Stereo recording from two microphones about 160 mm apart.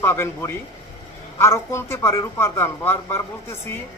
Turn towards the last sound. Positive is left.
turn(degrees=15)  # may be behind; listen again after turning